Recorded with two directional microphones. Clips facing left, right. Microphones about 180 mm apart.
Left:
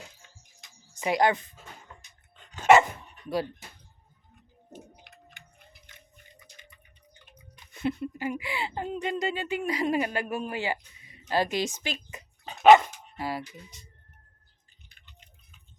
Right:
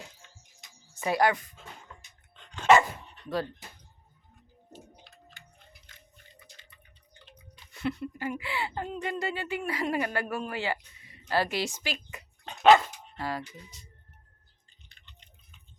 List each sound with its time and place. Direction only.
0.9 s speech: 15° left (ahead or behind)
2.3 s dog: 5° left (ahead or behind)
3.2 s a sound: 10° left (ahead or behind)
5.0 s a sound: 20° left (ahead or behind)
6.4 s speech: 10° left (ahead or behind)
12.7 s dog: 15° left (ahead or behind)
14.8 s drip: 5° left (ahead or behind)